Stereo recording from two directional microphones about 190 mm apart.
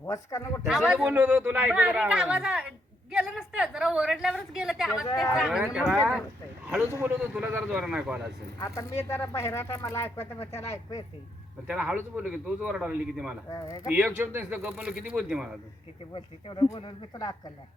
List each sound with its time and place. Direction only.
0.0 s speech: 15° left (ahead or behind)
0.6 s speech: 5° right (ahead or behind)
7.0 s speech: 10° right (ahead or behind)
8.5 s speech: 15° left (ahead or behind)
11.7 s speech: 5° right (ahead or behind)
13.5 s speech: 20° left (ahead or behind)
13.9 s speech: 10° right (ahead or behind)
16.1 s speech: 25° left (ahead or behind)